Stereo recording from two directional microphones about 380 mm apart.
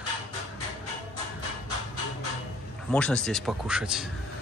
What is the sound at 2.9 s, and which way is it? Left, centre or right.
Speech, centre.